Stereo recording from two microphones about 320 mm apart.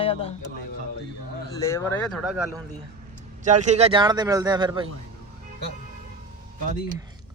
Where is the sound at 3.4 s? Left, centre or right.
Right.